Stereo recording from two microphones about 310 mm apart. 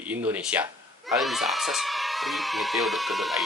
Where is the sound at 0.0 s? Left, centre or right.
Centre.